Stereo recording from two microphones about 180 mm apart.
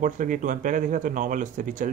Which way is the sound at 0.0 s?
45° right (ahead or behind).